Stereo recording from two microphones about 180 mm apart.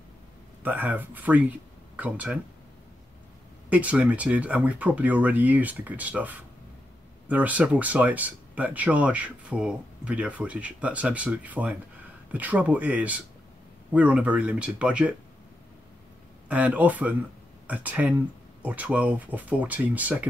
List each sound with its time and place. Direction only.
0.7 s speech: 10° right (ahead or behind)
3.7 s speech: 5° right (ahead or behind)
16.4 s speech: 10° right (ahead or behind)